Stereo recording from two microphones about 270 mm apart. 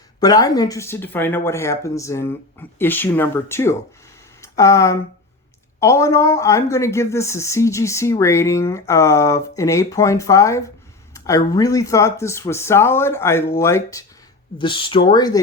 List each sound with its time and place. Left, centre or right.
0.2 s a woman's voice: centre